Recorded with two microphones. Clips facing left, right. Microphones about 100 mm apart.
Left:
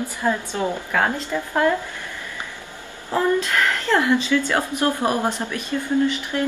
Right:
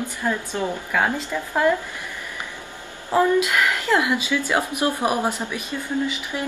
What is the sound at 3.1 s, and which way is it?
A woman's voice, 10° right (ahead or behind).